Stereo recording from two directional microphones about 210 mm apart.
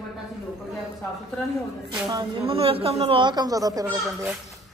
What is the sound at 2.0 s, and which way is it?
Speech, 25° right (ahead or behind).